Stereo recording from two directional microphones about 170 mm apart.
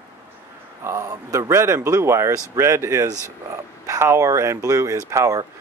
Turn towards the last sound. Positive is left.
turn(degrees=-20)  # may be behind; listen again after turning